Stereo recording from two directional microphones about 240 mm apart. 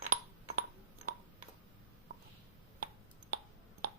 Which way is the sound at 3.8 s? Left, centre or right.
Right.